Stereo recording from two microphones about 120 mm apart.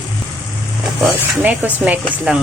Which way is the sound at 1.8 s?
10° right (ahead or behind).